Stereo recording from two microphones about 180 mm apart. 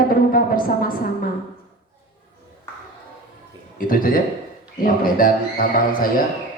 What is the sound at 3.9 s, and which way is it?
A woman's voice, 50° left (ahead or behind).